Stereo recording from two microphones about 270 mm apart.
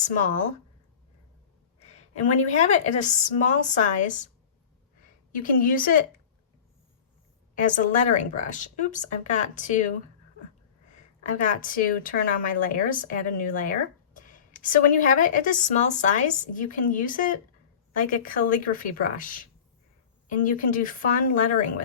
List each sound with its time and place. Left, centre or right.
0.0 s speech: left
2.2 s speech: left
5.4 s speech: left
7.6 s speech: left
11.3 s speech: left